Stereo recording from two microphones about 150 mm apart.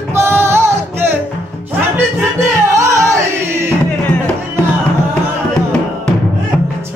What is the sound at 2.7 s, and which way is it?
Music, 20° right (ahead or behind).